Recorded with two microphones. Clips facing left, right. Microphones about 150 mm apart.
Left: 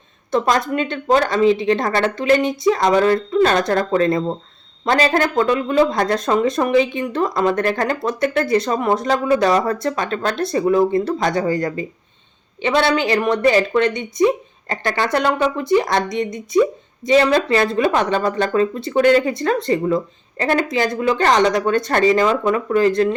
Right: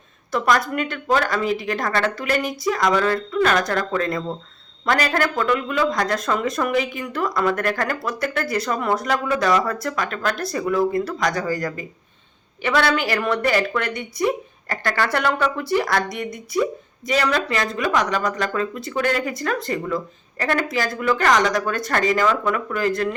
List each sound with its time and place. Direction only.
0.3 s speech: 25° left (ahead or behind)